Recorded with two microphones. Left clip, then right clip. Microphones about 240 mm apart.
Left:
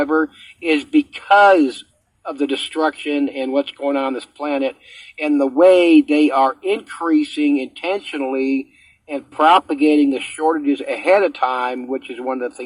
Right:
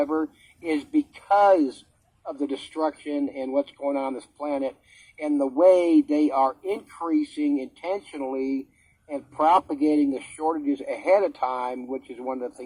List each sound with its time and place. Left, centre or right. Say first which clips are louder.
0.0 s speech: left 8 dB; left